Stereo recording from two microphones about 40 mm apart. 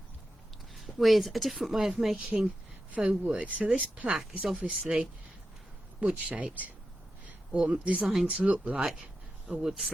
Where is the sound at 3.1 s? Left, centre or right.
Right.